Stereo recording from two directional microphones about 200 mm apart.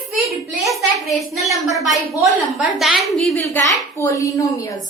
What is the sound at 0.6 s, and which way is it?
A woman's voice, centre (ahead or behind).